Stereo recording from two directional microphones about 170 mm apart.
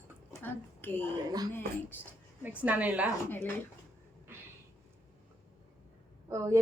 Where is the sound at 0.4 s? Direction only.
10° left (ahead or behind).